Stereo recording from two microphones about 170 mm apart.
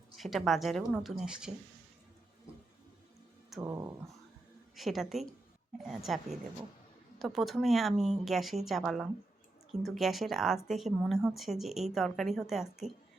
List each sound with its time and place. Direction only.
0.2 s speech: centre (ahead or behind)
3.6 s speech: 20° right (ahead or behind)
4.7 s speech: centre (ahead or behind)